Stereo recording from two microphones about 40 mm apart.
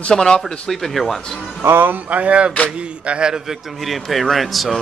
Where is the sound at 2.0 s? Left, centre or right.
Right.